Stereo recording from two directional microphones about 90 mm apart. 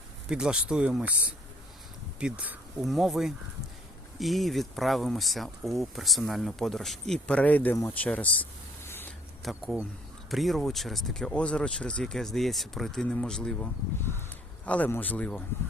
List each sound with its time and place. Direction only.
0.3 s speech: 10° right (ahead or behind)
2.8 s speech: centre (ahead or behind)
7.3 s speech: 15° left (ahead or behind)
8.9 s a sound: 25° left (ahead or behind)
9.4 s a man's voice: centre (ahead or behind); by 15.4 s 15° left (ahead or behind)